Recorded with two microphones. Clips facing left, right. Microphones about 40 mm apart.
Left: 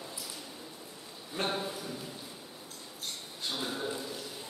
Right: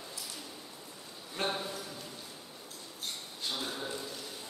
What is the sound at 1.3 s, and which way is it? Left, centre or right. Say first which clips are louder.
Speech: left 1 dB; centre.